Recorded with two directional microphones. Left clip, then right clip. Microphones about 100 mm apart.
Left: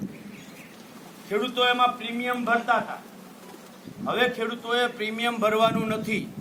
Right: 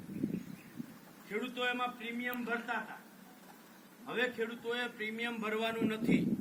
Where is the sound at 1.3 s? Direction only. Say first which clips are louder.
Left 13 dB; 35° left (ahead or behind).